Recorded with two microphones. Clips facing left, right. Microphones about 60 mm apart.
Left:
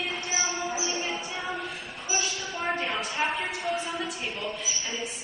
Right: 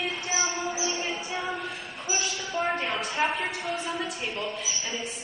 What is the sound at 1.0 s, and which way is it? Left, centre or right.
Music, centre.